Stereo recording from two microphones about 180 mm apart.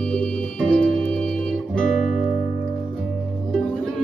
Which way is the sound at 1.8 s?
45° left (ahead or behind).